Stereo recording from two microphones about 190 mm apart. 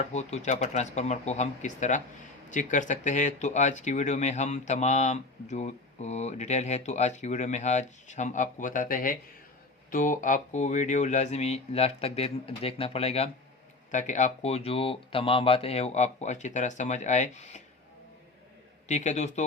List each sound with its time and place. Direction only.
0.0 s speech: 35° left (ahead or behind)
18.9 s speech: 40° left (ahead or behind)